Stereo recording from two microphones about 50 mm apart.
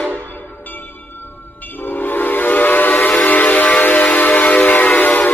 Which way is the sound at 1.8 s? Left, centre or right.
Left.